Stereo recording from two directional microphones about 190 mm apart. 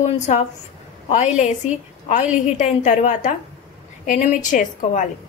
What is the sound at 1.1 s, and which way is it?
A woman's voice, 35° left (ahead or behind).